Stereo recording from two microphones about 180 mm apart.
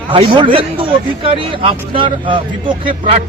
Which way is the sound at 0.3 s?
30° right (ahead or behind).